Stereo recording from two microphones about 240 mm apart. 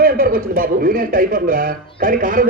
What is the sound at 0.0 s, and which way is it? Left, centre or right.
A man's voice, right.